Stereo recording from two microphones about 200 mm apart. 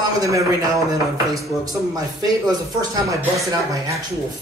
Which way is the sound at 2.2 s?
15° right (ahead or behind).